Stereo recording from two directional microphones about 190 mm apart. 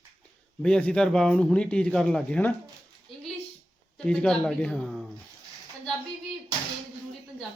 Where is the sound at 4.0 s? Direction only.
5° left (ahead or behind).